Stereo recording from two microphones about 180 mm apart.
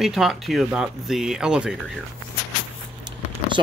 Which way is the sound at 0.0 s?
Centre (ahead or behind).